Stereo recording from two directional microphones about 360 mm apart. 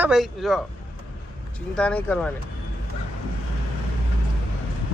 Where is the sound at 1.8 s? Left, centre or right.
Centre.